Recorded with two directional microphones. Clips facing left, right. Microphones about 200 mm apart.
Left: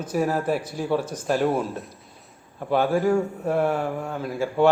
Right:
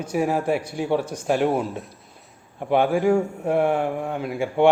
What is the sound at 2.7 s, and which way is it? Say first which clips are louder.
A man's voice: right 2 dB; 15° right (ahead or behind).